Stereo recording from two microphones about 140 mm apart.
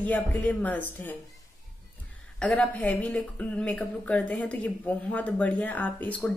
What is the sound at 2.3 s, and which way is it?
A woman's voice, 10° left (ahead or behind).